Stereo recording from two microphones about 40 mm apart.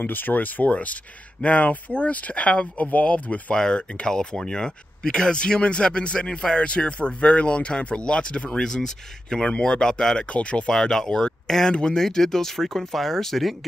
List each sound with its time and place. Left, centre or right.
0.0 s speech: left
3.5 s speech: left
10.7 s speech: centre